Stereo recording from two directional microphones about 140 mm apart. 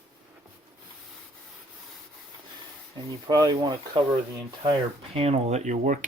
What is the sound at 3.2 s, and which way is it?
Speech, 30° right (ahead or behind).